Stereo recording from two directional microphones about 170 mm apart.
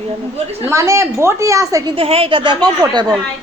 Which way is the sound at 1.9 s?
35° right (ahead or behind).